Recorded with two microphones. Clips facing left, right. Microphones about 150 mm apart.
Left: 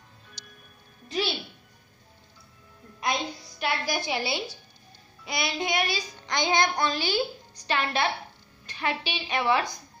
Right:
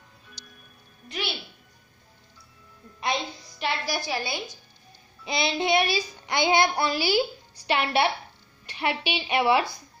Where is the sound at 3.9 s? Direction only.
20° left (ahead or behind).